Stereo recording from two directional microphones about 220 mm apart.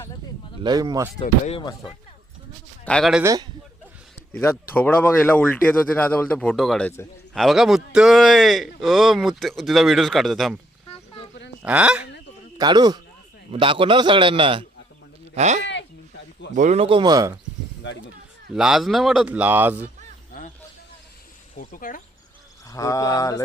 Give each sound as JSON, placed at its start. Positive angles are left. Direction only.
{"t": 0.6, "sound": "speech", "side_deg": -20}
{"t": 1.2, "sound": "speech", "side_deg": 25}
{"t": 2.8, "sound": "speech", "side_deg": 0}
{"t": 4.3, "sound": "speech", "side_deg": 10}
{"t": 11.6, "sound": "speech", "side_deg": -5}
{"t": 12.5, "sound": "a man's voice", "side_deg": -20}
{"t": 18.5, "sound": "speech", "side_deg": 0}
{"t": 21.5, "sound": "speech", "side_deg": 40}
{"t": 22.6, "sound": "speech", "side_deg": 15}